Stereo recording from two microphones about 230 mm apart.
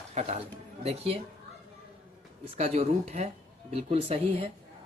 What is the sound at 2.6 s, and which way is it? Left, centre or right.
Speech, right.